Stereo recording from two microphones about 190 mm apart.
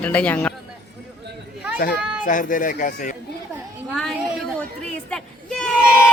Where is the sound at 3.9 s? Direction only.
Centre (ahead or behind).